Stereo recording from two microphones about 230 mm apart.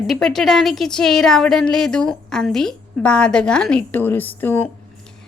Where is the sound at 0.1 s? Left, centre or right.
Centre.